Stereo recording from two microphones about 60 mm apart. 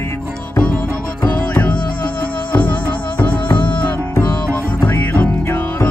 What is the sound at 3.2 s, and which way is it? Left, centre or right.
Music, left.